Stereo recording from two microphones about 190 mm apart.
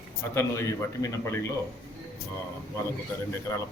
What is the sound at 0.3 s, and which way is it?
A man's voice, 15° left (ahead or behind).